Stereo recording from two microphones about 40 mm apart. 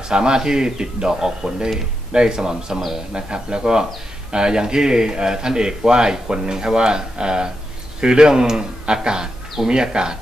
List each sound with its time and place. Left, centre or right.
0.1 s speech: centre